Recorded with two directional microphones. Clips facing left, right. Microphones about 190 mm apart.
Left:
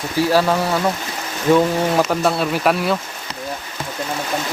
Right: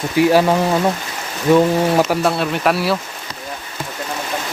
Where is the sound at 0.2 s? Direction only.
15° right (ahead or behind).